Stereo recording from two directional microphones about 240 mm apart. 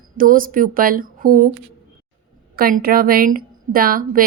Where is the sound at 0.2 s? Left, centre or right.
Right.